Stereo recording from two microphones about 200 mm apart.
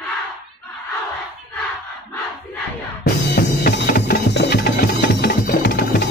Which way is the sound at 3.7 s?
50° left (ahead or behind).